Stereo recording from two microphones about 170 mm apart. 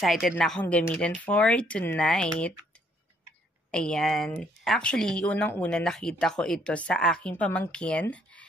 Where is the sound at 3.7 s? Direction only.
5° left (ahead or behind).